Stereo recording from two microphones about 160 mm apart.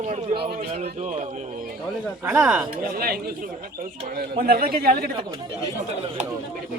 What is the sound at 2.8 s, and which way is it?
A man's voice, 65° right (ahead or behind).